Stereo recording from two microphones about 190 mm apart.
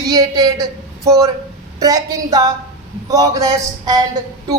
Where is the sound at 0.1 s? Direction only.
20° right (ahead or behind).